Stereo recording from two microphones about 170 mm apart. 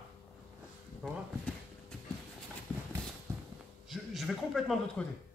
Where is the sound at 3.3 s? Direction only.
15° right (ahead or behind).